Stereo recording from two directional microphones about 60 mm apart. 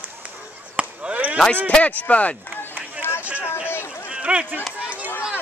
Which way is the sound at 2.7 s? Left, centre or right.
Right.